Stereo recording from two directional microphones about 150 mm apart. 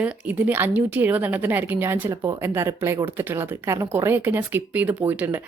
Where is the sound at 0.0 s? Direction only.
10° right (ahead or behind).